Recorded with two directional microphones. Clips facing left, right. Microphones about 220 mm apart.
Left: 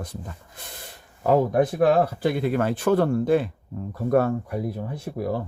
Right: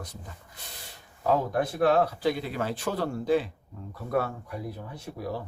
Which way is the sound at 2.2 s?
55° left (ahead or behind).